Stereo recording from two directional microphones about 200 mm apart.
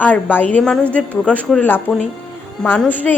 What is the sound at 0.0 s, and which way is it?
Speech, 10° left (ahead or behind).